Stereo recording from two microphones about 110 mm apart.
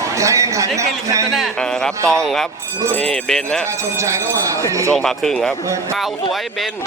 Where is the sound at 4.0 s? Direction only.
25° right (ahead or behind).